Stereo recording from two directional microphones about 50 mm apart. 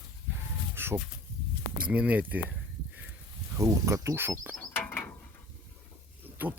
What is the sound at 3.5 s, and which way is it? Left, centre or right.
Speech, right.